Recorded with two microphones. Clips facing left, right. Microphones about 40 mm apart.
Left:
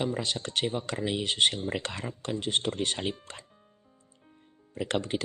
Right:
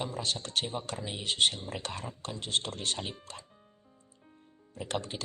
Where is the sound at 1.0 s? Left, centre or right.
Left.